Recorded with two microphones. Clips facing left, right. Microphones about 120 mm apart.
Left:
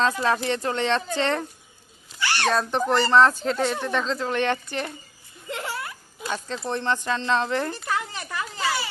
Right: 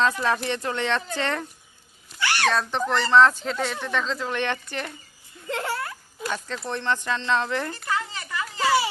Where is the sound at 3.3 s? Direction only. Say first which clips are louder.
Left 4 dB; 40° left (ahead or behind).